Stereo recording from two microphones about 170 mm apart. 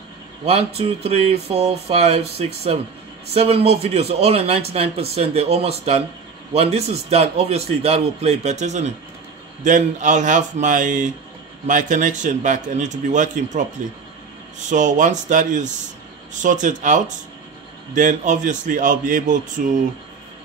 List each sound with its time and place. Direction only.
0.5 s a man's voice: 35° right (ahead or behind)
14.7 s a man's voice: 45° right (ahead or behind)